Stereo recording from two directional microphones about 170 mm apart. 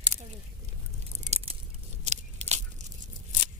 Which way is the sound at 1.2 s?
40° right (ahead or behind).